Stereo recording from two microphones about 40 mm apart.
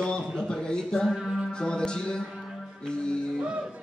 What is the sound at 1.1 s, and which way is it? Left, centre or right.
Music, centre.